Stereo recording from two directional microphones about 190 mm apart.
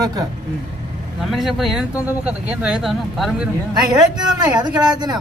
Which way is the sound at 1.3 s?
Centre (ahead or behind).